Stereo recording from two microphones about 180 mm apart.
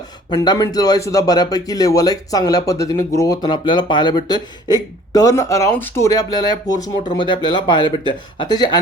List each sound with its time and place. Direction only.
0.3 s speech: 25° left (ahead or behind)